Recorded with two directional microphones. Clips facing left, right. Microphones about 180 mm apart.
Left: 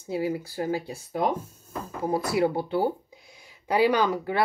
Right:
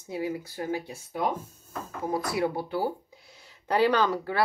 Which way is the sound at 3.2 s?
15° left (ahead or behind).